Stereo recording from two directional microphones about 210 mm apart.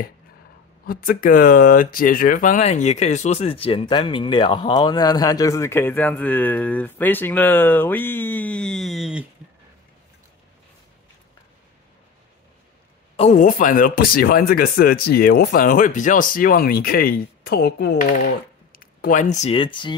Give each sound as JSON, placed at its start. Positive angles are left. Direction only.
{"t": 0.8, "sound": "speech", "side_deg": 40}
{"t": 13.1, "sound": "speech", "side_deg": 30}